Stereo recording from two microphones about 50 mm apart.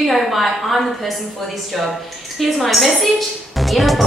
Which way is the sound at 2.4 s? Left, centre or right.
Centre.